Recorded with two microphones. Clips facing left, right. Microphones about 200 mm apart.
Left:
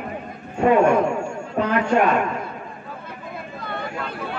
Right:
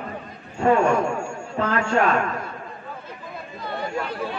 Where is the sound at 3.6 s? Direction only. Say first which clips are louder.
Right 2 dB; 55° left (ahead or behind).